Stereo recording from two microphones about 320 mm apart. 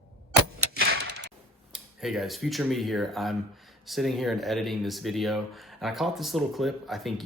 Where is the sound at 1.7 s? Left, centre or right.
Centre.